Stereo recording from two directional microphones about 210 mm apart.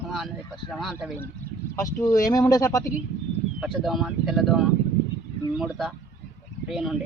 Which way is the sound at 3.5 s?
Centre (ahead or behind).